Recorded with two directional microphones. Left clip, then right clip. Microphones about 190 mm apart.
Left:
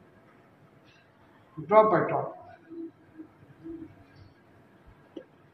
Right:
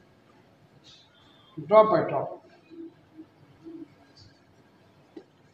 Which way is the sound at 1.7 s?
25° right (ahead or behind).